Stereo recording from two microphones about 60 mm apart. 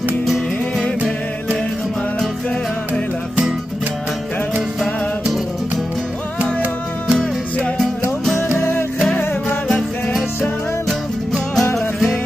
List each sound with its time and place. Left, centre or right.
6.4 s music: centre
8.4 s music: left
9.7 s music: centre
11.7 s music: centre